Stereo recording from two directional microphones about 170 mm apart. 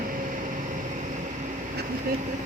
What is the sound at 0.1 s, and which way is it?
Vehicle, 50° right (ahead or behind).